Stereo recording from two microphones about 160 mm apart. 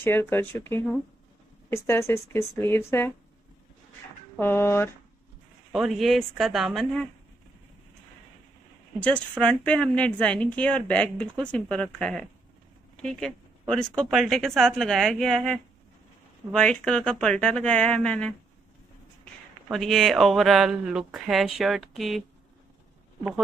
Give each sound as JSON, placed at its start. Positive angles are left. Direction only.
{"t": 0.0, "sound": "a woman's voice", "side_deg": 15}
{"t": 4.4, "sound": "a woman's voice", "side_deg": 15}
{"t": 5.7, "sound": "speech", "side_deg": 0}
{"t": 9.4, "sound": "a woman's voice", "side_deg": 5}
{"t": 19.7, "sound": "speech", "side_deg": 0}